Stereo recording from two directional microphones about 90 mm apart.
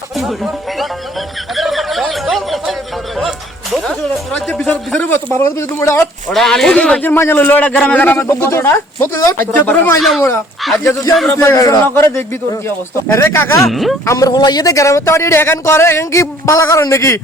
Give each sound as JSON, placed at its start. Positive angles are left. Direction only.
{"t": 1.5, "sound": "snicker", "side_deg": 0}
{"t": 3.8, "sound": "speech", "side_deg": 10}
{"t": 5.0, "sound": "speech", "side_deg": 30}
{"t": 6.3, "sound": "speech", "side_deg": 5}
{"t": 7.0, "sound": "speech", "side_deg": 25}
{"t": 8.3, "sound": "speech", "side_deg": 30}
{"t": 10.6, "sound": "speech", "side_deg": 0}
{"t": 11.3, "sound": "a man's voice", "side_deg": 35}
{"t": 13.7, "sound": "speech", "side_deg": 0}
{"t": 14.0, "sound": "a man's voice", "side_deg": 35}